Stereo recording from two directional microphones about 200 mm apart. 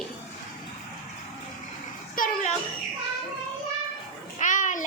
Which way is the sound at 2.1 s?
40° left (ahead or behind).